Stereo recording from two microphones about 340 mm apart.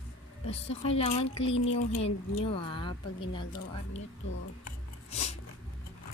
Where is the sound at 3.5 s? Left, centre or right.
Left.